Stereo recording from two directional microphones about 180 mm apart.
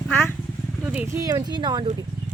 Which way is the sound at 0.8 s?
10° right (ahead or behind).